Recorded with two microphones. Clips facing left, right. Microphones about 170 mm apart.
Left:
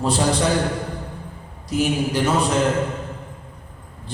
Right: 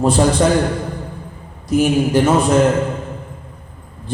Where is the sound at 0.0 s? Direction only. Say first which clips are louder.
Right 6 dB; 50° right (ahead or behind).